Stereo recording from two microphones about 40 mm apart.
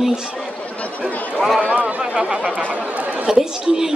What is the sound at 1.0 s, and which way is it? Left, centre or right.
Speech, centre.